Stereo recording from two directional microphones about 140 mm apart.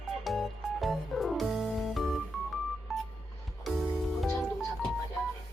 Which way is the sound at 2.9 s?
Centre (ahead or behind).